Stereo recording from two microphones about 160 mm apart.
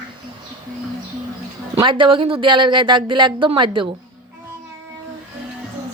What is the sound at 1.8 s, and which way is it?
Speech, 30° right (ahead or behind).